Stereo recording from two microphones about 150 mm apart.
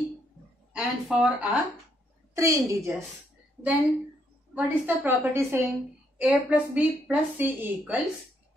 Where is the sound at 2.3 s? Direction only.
20° right (ahead or behind).